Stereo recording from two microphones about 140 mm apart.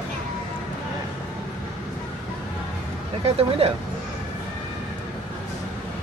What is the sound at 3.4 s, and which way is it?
Speech, 45° right (ahead or behind).